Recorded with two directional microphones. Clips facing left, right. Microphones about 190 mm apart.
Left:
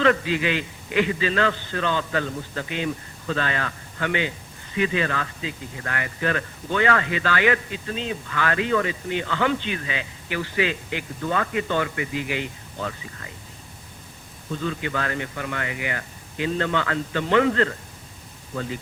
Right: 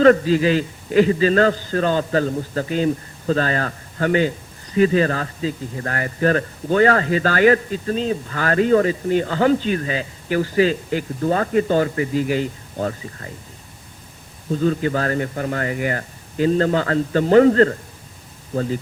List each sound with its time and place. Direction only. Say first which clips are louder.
0.0 s a man's voice: right 8 dB; 40° right (ahead or behind)
14.5 s a man's voice: right 8 dB; 40° right (ahead or behind)